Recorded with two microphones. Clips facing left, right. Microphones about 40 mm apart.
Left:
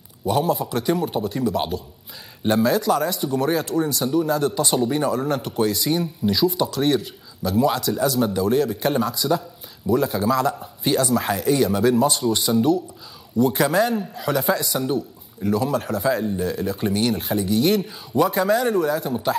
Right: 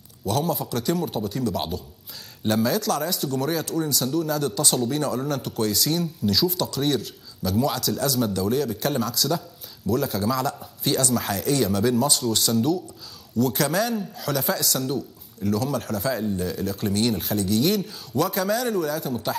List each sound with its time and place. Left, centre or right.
0.2 s speech: centre